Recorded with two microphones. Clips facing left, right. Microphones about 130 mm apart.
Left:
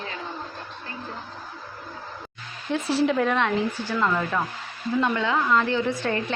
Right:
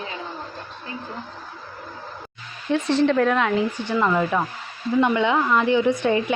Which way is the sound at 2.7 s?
5° left (ahead or behind).